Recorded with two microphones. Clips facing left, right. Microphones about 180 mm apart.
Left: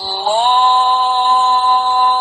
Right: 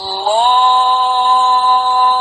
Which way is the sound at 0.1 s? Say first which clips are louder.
Right 1 dB; 55° right (ahead or behind).